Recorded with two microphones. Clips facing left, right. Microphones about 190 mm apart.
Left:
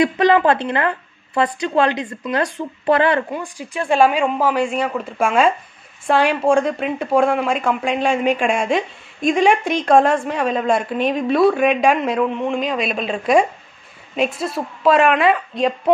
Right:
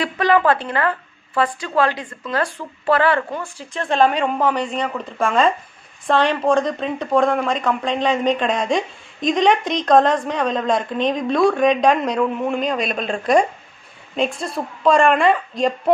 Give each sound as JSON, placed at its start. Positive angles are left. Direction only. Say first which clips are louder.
{"t": 0.0, "sound": "a woman's voice", "louder": "left 3 dB", "side_deg": 20}